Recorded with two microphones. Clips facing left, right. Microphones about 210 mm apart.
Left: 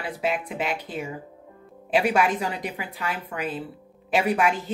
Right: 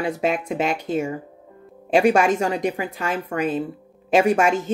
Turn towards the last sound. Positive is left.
turn(degrees=-45)  # may be behind; listen again after turning